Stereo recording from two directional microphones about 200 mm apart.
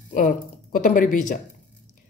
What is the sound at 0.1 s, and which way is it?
A woman's voice, 40° left (ahead or behind).